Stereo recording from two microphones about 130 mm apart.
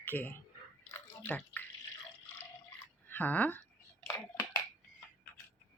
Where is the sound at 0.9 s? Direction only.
20° left (ahead or behind).